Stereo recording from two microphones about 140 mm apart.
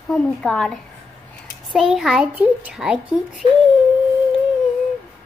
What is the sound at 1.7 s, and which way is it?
A child's voice, centre (ahead or behind).